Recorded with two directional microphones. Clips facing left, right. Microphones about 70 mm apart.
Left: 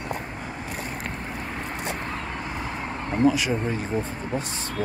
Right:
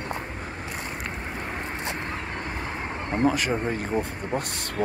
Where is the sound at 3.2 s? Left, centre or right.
Right.